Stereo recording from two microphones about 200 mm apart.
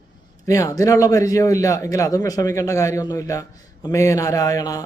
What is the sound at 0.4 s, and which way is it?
Speech, 15° left (ahead or behind).